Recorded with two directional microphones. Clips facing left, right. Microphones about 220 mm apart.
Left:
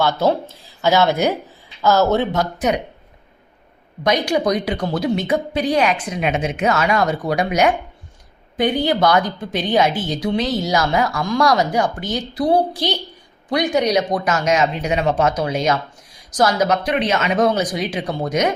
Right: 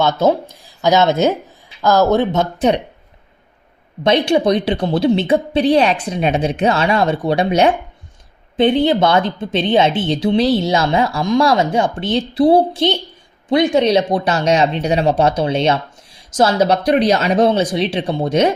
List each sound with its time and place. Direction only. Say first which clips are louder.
0.0 s a woman's voice: right 3 dB; 20° right (ahead or behind)
4.0 s a woman's voice: right 4 dB; 30° right (ahead or behind)